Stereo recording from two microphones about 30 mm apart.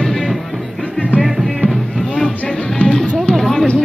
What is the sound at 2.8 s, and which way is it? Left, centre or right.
Music, left.